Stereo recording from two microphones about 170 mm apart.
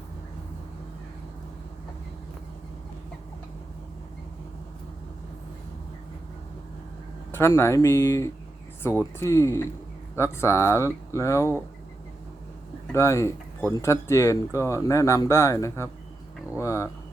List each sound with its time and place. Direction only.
7.3 s speech: 15° left (ahead or behind)
12.9 s speech: 15° left (ahead or behind)
16.6 s a sound: 15° left (ahead or behind)